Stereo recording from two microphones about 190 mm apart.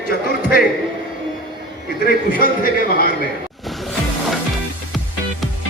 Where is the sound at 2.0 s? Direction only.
50° left (ahead or behind).